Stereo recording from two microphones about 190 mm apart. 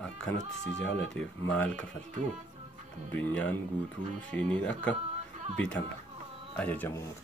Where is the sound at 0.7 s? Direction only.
5° left (ahead or behind).